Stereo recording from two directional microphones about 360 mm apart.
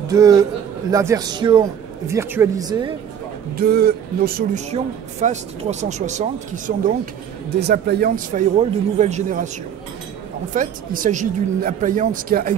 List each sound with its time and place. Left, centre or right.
0.1 s a man's voice: centre
3.5 s speech: right
7.6 s speech: right
10.5 s speech: right